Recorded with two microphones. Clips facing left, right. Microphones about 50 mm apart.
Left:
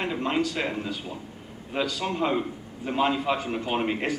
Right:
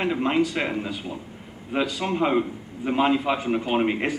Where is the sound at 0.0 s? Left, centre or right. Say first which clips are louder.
Right 4 dB; centre.